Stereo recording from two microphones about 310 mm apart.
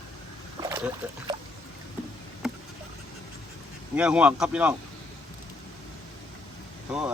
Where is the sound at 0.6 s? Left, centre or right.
Centre.